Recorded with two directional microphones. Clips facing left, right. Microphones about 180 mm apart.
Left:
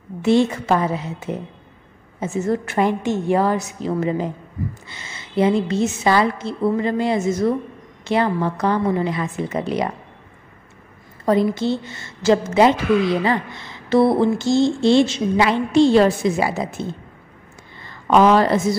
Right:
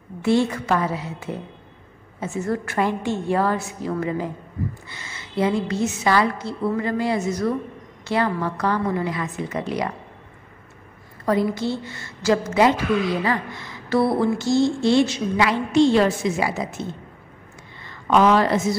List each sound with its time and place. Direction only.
0.2 s a woman's voice: 20° left (ahead or behind)
11.2 s a woman's voice: 25° left (ahead or behind)
17.8 s a woman's voice: 35° left (ahead or behind)